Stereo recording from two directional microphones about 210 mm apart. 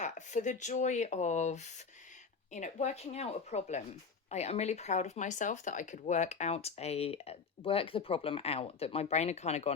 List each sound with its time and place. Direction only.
0.0 s speech: 35° left (ahead or behind)